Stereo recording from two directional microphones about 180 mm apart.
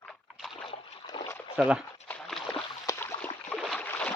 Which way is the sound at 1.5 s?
5° right (ahead or behind).